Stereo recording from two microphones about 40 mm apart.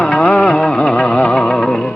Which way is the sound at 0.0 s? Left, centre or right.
Left.